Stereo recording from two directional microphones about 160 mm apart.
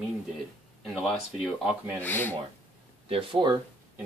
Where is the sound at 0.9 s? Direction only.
Centre (ahead or behind).